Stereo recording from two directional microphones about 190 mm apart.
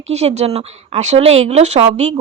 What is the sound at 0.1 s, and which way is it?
Speech, 35° right (ahead or behind).